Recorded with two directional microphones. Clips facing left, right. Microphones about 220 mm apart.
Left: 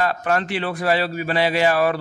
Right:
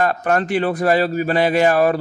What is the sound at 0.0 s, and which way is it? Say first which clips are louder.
A man's voice: right 3 dB; 45° right (ahead or behind).